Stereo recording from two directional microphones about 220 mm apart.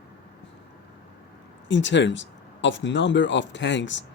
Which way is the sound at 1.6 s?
55° left (ahead or behind).